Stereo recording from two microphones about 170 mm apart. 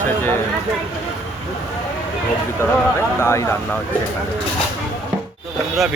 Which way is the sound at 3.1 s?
15° left (ahead or behind).